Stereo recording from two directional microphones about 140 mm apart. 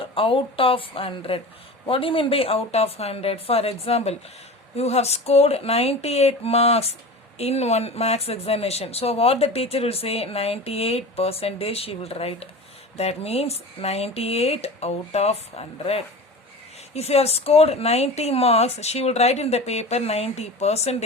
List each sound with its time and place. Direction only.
0.0 s a woman's voice: 40° left (ahead or behind)